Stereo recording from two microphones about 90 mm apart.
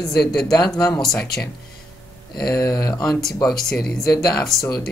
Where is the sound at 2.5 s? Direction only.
40° left (ahead or behind).